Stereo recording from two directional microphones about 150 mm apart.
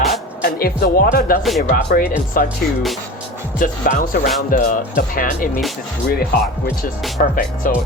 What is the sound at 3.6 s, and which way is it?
Speech, 65° left (ahead or behind).